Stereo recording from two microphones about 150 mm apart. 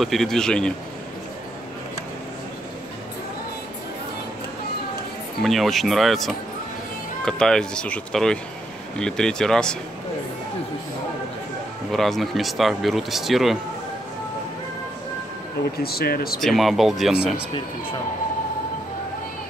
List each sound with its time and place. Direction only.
0.0 s speech: centre (ahead or behind)
5.4 s speech: centre (ahead or behind)
11.9 s speech: centre (ahead or behind)
15.8 s speech: 90° left
16.3 s speech: centre (ahead or behind)